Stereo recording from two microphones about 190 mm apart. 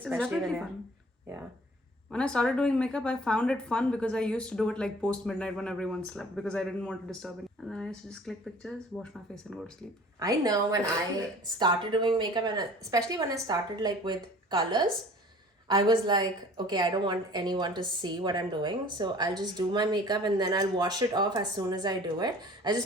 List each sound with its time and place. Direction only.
0.2 s speech: centre (ahead or behind)
2.0 s speech: 5° left (ahead or behind)
10.2 s a woman's voice: 20° right (ahead or behind)